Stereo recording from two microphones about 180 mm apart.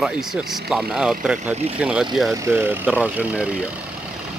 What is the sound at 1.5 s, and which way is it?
Speech, 35° right (ahead or behind).